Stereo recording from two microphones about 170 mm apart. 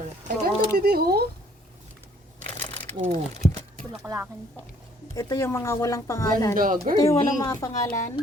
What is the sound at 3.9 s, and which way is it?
Speech, 15° right (ahead or behind).